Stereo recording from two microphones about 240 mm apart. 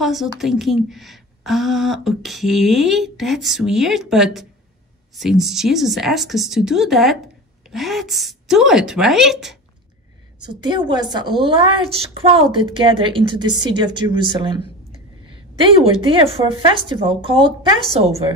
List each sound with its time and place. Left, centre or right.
0.0 s speech: centre
10.6 s a woman's voice: centre